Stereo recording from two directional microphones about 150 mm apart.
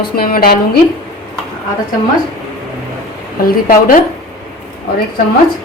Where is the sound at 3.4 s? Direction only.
80° left.